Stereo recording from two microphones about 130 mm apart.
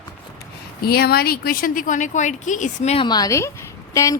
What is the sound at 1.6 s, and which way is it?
Speech, 90° left.